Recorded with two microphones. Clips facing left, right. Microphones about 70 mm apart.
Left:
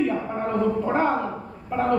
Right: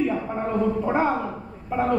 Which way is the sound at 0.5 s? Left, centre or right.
Centre.